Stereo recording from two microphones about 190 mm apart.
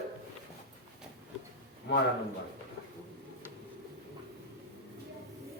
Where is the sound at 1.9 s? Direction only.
65° left (ahead or behind).